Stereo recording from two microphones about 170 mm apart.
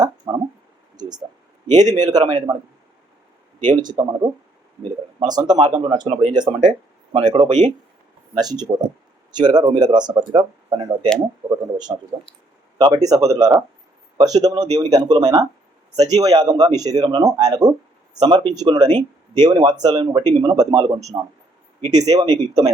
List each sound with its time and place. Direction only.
0.0 s a sound: 20° right (ahead or behind)
1.7 s speech: 25° right (ahead or behind)
3.8 s speech: 25° right (ahead or behind)